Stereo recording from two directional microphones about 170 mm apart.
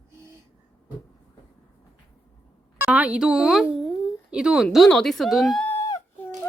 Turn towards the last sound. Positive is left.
turn(degrees=15)  # may be behind; listen again after turning